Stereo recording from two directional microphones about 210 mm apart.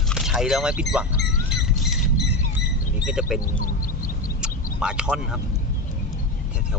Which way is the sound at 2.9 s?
5° right (ahead or behind).